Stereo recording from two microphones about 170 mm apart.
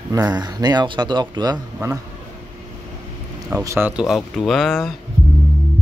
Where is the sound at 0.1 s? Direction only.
20° right (ahead or behind).